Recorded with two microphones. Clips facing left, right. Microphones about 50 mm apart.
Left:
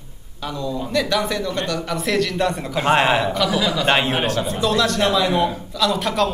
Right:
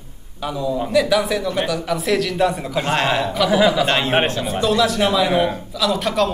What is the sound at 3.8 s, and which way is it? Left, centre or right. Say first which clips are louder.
Speech: left 1 dB; centre.